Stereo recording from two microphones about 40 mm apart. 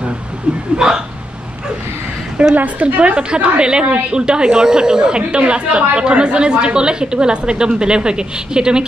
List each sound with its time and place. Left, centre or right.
0.7 s speech: centre
2.5 s a woman's voice: right